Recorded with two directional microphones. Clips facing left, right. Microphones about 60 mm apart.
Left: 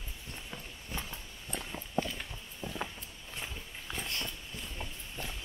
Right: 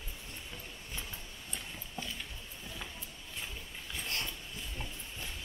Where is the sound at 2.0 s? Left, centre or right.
Left.